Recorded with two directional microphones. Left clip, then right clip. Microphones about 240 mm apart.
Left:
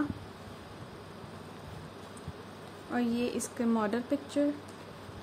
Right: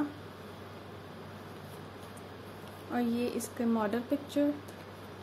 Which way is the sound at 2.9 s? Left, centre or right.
Centre.